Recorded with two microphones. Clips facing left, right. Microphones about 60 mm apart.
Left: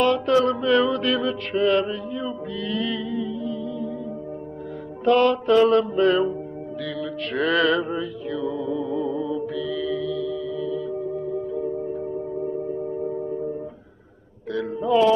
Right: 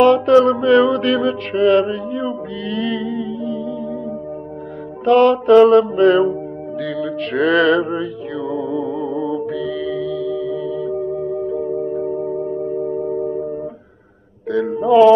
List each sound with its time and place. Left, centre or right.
0.0 s mantra: right
5.0 s mantra: right
6.8 s music: right
14.5 s mantra: right